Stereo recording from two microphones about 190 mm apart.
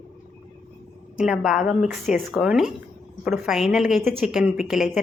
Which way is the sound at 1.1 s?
5° right (ahead or behind).